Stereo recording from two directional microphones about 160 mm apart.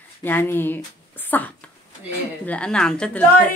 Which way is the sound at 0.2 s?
10° left (ahead or behind).